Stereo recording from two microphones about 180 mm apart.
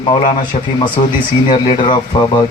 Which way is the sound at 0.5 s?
40° left (ahead or behind).